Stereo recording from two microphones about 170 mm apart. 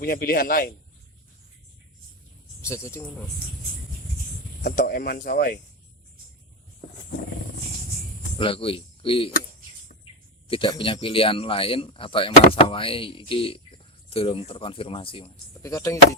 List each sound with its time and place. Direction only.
0.0 s speech: 60° left (ahead or behind)
2.6 s speech: 15° left (ahead or behind)
4.6 s speech: 55° left (ahead or behind)
8.4 s speech: 30° left (ahead or behind)
10.5 s speech: 30° left (ahead or behind)
15.6 s speech: 20° left (ahead or behind)